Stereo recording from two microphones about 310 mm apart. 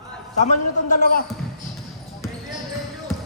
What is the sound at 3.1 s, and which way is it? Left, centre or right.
Music, centre.